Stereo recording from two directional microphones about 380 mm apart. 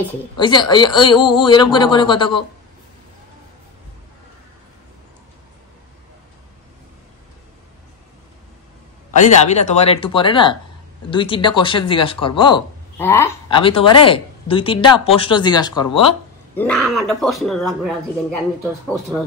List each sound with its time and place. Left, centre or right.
0.0 s speech: centre
9.2 s a man's voice: centre